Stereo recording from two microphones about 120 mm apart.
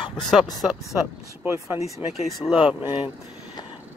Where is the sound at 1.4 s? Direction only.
20° right (ahead or behind).